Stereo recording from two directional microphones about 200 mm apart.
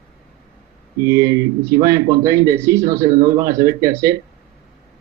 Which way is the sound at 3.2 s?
50° right (ahead or behind).